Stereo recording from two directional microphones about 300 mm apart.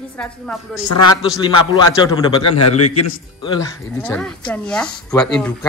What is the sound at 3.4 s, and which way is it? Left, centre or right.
A woman's voice, centre.